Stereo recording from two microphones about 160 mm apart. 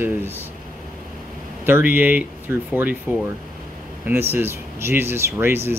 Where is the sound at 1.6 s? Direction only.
10° right (ahead or behind).